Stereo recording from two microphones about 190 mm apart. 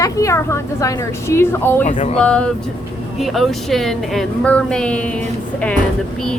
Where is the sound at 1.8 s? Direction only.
40° left (ahead or behind).